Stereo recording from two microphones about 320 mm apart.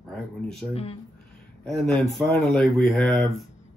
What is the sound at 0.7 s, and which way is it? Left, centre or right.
Speech, centre.